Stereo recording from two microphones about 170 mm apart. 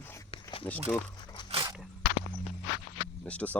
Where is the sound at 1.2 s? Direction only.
25° left (ahead or behind).